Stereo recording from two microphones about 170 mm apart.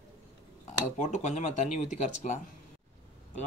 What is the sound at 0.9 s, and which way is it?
Speech, 45° left (ahead or behind).